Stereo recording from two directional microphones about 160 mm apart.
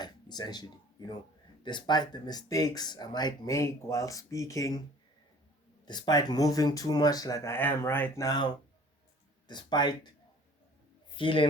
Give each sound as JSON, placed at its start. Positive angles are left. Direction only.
{"t": 0.0, "sound": "a sound", "side_deg": 25}
{"t": 1.6, "sound": "speech", "side_deg": 25}
{"t": 5.8, "sound": "speech", "side_deg": 25}
{"t": 11.1, "sound": "a man's voice", "side_deg": 30}